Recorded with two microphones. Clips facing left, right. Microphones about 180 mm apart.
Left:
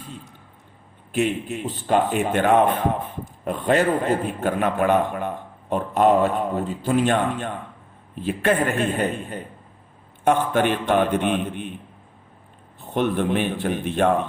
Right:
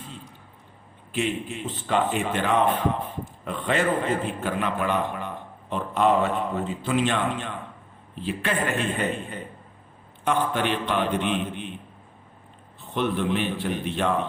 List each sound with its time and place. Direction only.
1.5 s a man's voice: 45° left (ahead or behind)
12.9 s a man's voice: 50° left (ahead or behind)